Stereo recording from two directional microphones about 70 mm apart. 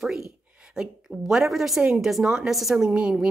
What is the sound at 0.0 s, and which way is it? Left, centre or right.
A woman's voice, centre.